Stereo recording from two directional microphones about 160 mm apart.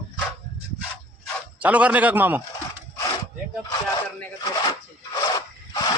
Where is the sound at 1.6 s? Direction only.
10° right (ahead or behind).